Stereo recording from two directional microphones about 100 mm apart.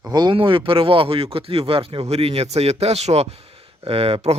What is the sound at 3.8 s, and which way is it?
Speech, 75° right (ahead or behind).